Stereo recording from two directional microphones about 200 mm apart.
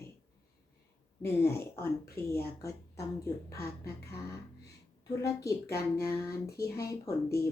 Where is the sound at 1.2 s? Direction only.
15° left (ahead or behind).